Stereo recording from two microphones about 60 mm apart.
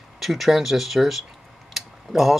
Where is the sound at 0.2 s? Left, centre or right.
Centre.